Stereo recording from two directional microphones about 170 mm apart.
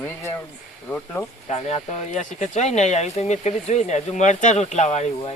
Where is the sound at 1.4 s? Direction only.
40° left (ahead or behind).